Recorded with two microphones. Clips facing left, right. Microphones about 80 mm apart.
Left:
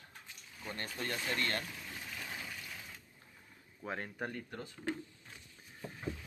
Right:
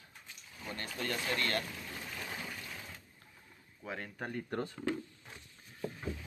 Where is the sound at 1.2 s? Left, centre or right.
Centre.